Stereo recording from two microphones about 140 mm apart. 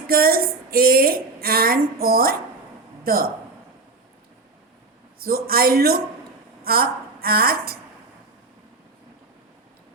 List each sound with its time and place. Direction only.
0.1 s a woman's voice: 90° right
5.2 s a woman's voice: 90° right